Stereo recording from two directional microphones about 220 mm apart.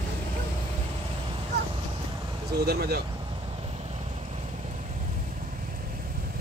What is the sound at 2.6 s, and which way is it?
Speech, 45° right (ahead or behind).